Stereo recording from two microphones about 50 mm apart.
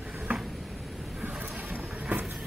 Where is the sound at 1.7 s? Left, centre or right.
Right.